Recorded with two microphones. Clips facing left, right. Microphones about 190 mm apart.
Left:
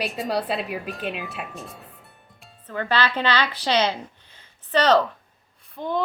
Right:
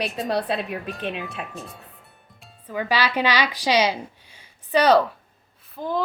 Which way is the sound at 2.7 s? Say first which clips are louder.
Even; 10° right (ahead or behind).